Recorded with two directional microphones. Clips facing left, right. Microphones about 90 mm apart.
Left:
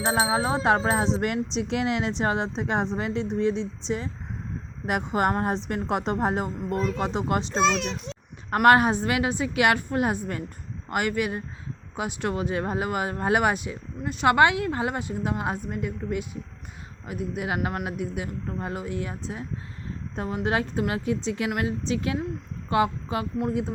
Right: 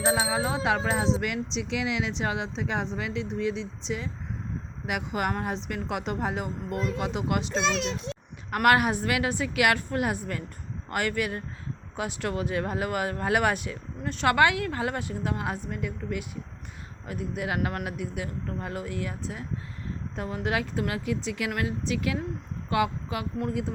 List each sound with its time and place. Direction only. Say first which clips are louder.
0.1 s speech: left 5 dB; 35° left (ahead or behind)
23.4 s speech: left 2 dB; 20° left (ahead or behind)